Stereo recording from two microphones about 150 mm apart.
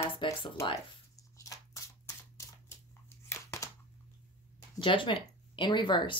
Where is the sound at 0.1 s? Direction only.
35° left (ahead or behind).